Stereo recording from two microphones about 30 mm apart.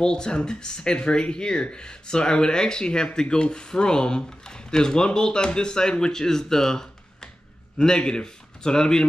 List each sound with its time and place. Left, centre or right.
0.0 s a man's voice: left